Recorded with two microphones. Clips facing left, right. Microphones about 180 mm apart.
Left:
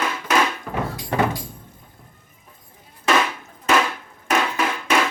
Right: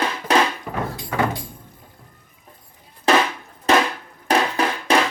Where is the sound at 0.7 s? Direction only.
5° right (ahead or behind).